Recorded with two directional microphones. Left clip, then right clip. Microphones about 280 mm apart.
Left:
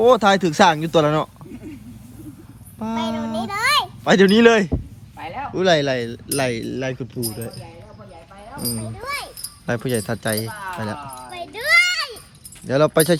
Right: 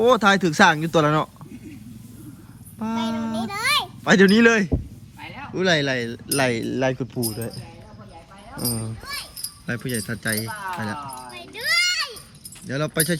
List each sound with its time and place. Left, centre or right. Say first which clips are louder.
0.0 s speech: left 3 dB; centre
2.7 s a sound: left 2 dB; centre
5.2 s speech: left 4 dB; centre
9.6 s speech: left 6 dB; centre
11.3 s children playing: left 6 dB; centre
12.7 s speech: left 9 dB; centre